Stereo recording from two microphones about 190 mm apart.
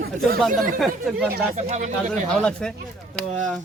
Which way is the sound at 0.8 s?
5° right (ahead or behind).